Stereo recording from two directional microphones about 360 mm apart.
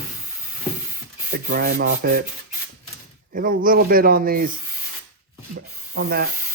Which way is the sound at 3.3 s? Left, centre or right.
Right.